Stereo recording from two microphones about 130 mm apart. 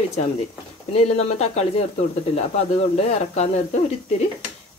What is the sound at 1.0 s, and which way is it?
Speech, 55° left (ahead or behind).